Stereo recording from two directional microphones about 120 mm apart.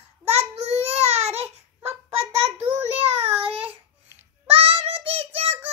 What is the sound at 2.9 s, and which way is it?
Child singing, 55° right (ahead or behind).